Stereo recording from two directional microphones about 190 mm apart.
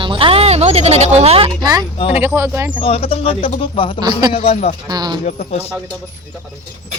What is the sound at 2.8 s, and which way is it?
Speech, 30° left (ahead or behind).